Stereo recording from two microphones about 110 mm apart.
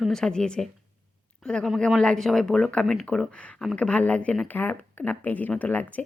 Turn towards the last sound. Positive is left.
turn(degrees=15)  # may be behind; listen again after turning